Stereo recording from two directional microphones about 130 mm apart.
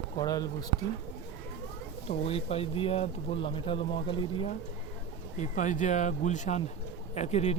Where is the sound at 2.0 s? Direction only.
50° left (ahead or behind).